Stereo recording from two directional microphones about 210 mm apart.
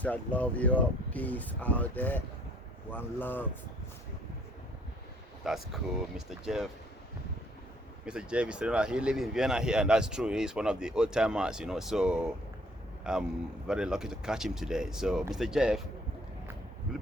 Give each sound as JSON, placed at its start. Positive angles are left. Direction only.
{"t": 0.0, "sound": "speech", "side_deg": 5}
{"t": 5.4, "sound": "speech", "side_deg": 0}
{"t": 8.0, "sound": "speech", "side_deg": -5}